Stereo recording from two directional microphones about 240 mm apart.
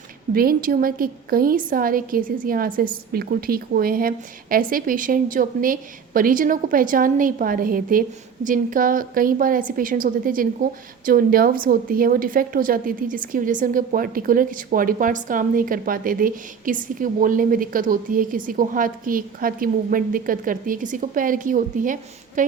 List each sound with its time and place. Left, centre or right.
0.3 s a woman's voice: right